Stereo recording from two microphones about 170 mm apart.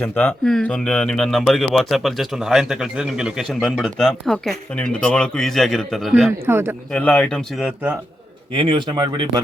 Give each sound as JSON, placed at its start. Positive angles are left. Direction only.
{"t": 0.0, "sound": "speech", "side_deg": 10}
{"t": 6.4, "sound": "a man's voice", "side_deg": -15}
{"t": 6.9, "sound": "speech", "side_deg": 5}
{"t": 8.5, "sound": "speech", "side_deg": -30}